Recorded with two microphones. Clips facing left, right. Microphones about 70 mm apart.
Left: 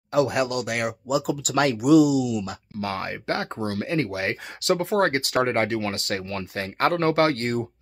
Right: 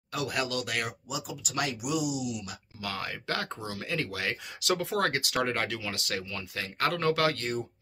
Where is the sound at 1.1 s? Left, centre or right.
Left.